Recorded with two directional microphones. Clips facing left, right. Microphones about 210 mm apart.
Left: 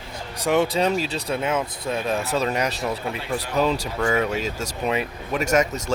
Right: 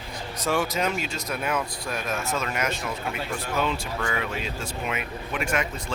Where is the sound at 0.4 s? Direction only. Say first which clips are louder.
Left 5 dB; 20° left (ahead or behind).